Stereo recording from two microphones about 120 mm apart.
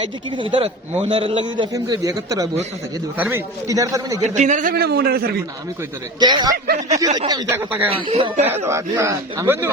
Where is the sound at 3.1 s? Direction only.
15° right (ahead or behind).